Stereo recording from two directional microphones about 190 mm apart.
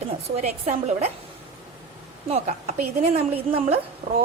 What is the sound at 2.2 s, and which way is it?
A woman's voice, 35° right (ahead or behind).